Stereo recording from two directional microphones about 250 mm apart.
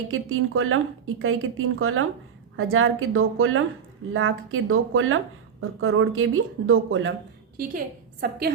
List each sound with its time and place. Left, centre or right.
0.1 s a woman's voice: right
7.5 s a woman's voice: right